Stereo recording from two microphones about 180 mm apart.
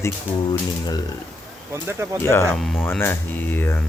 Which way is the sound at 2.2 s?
15° left (ahead or behind).